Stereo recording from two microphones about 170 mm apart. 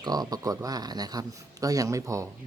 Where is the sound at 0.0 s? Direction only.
25° right (ahead or behind).